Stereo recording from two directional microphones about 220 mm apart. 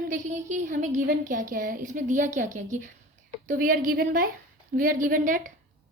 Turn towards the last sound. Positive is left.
turn(degrees=-40)  # may be behind; listen again after turning